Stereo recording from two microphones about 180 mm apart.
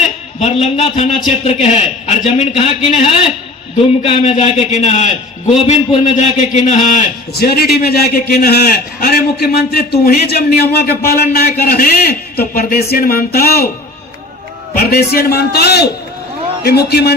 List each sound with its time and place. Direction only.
0.0 s a man's voice: 35° left (ahead or behind)
7.3 s a man's voice: 60° left (ahead or behind)
14.8 s a man's voice: 60° left (ahead or behind)